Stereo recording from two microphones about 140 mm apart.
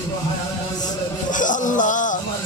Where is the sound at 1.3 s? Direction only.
65° left (ahead or behind).